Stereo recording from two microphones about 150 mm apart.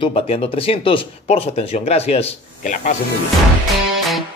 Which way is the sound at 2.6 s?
55° left (ahead or behind).